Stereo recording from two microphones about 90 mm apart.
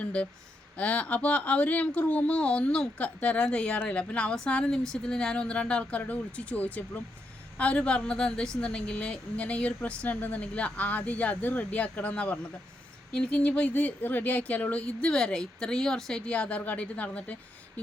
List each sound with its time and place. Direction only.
0.0 s speech: 15° left (ahead or behind)